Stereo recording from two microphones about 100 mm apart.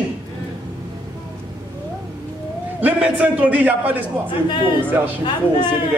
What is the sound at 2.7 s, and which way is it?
A man's voice, 15° right (ahead or behind).